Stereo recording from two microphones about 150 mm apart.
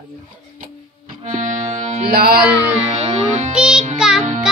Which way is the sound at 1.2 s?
55° right (ahead or behind).